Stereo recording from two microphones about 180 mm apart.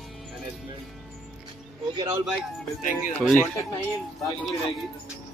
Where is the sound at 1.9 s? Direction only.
15° right (ahead or behind).